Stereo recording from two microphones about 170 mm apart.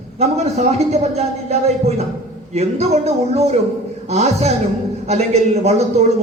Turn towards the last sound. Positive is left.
turn(degrees=-40)  # may be behind; listen again after turning